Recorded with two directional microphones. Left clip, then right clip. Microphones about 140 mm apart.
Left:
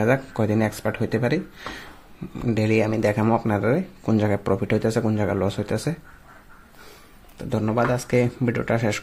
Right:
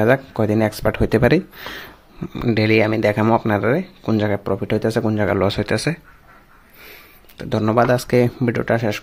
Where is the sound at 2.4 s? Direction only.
15° right (ahead or behind).